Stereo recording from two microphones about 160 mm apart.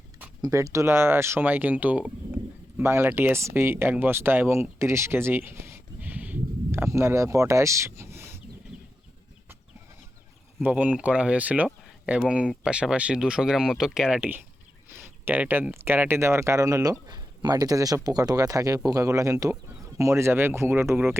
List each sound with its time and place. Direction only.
0.4 s speech: 20° right (ahead or behind)
10.6 s speech: 10° right (ahead or behind)